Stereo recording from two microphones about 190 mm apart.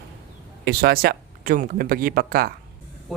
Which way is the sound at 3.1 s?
Centre (ahead or behind).